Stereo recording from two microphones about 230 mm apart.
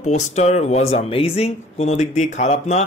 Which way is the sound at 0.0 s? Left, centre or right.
Left.